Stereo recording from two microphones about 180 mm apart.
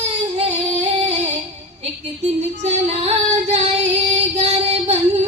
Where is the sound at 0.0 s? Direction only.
35° right (ahead or behind).